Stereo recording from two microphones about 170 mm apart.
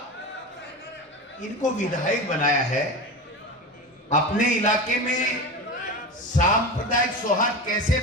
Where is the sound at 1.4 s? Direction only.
50° left (ahead or behind).